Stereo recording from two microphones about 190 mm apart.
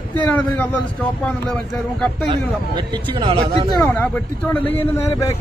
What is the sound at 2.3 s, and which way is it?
Speech, 25° right (ahead or behind).